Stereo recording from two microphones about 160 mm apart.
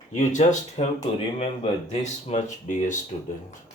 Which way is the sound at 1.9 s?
50° left (ahead or behind).